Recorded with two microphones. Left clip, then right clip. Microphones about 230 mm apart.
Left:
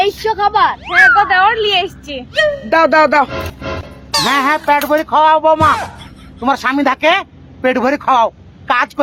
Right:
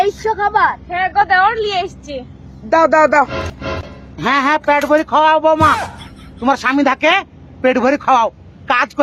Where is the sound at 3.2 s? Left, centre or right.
Centre.